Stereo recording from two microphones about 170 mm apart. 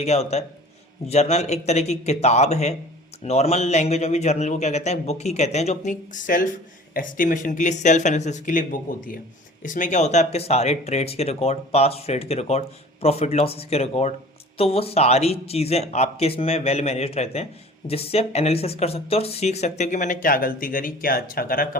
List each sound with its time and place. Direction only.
0.0 s speech: 40° left (ahead or behind); by 21.8 s 55° left (ahead or behind)